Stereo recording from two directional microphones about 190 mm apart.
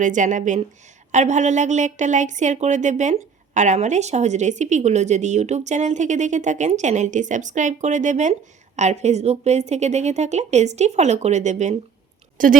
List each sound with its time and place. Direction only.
0.0 s a woman's voice: 40° right (ahead or behind)